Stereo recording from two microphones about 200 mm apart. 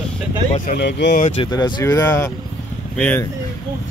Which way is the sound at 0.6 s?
55° left (ahead or behind).